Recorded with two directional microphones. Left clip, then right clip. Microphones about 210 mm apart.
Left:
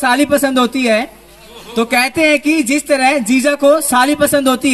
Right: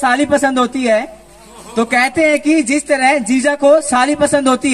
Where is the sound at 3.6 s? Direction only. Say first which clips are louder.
Right 1 dB; 60° left (ahead or behind).